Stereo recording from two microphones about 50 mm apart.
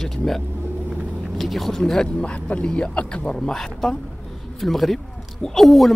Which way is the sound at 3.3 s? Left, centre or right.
Centre.